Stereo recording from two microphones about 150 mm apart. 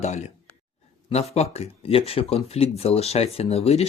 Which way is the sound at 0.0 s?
50° left (ahead or behind).